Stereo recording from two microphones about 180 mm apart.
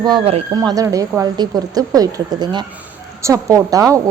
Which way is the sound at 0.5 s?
20° right (ahead or behind).